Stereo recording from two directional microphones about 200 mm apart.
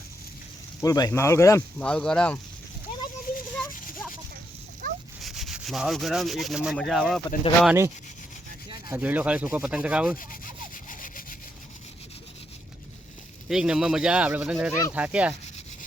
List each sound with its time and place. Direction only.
0.8 s speech: 20° left (ahead or behind)
3.3 s a sound: 45° left (ahead or behind)
4.8 s dog: 45° right (ahead or behind)
5.2 s rub: centre (ahead or behind)
7.6 s speech: 5° right (ahead or behind)
9.0 s speech: 5° right (ahead or behind)
10.8 s sawing: 40° left (ahead or behind)
13.5 s speech: 5° right (ahead or behind)